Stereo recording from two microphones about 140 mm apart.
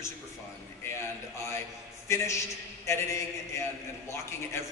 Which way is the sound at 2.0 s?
20° left (ahead or behind).